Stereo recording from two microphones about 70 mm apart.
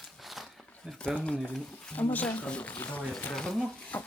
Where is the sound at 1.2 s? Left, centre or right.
Centre.